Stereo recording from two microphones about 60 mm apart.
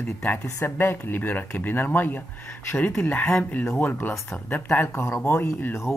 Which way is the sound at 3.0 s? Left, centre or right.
Left.